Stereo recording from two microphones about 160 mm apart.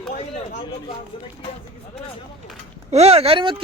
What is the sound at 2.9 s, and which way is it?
Speech, 40° right (ahead or behind).